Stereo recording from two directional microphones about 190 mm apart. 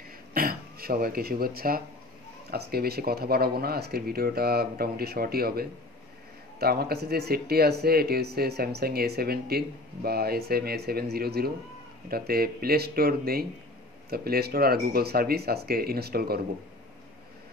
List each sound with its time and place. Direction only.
0.3 s speech: 50° right (ahead or behind)